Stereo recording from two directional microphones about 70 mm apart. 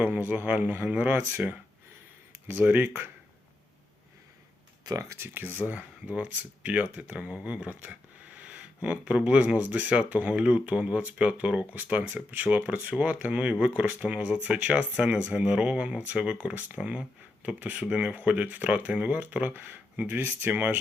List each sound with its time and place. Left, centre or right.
0.0 s speech: right
4.9 s speech: right
5.2 s speech: right